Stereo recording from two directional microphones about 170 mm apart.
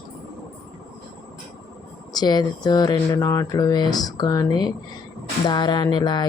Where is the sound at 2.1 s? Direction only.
25° left (ahead or behind).